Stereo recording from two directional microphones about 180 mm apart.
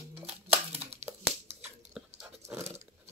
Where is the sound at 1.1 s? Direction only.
15° right (ahead or behind).